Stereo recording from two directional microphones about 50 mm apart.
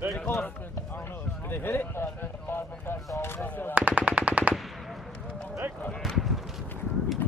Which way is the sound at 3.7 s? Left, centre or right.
Right.